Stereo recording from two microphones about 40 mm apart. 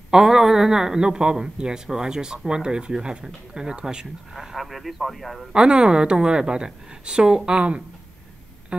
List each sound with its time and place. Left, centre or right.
0.1 s a man's voice: centre
4.3 s a man's voice: centre
5.5 s a woman's voice: right